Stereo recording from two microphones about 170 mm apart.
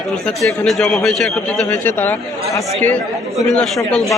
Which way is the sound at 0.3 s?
5° left (ahead or behind).